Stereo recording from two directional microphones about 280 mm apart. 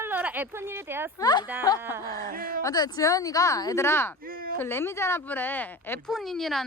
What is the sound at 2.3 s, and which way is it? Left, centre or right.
Speech, right.